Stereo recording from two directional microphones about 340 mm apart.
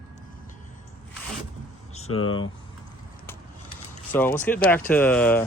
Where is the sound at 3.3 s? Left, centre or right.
Centre.